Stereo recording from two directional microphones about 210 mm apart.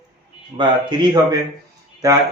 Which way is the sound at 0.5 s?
20° right (ahead or behind).